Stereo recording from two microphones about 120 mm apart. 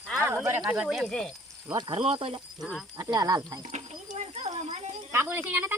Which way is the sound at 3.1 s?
35° right (ahead or behind).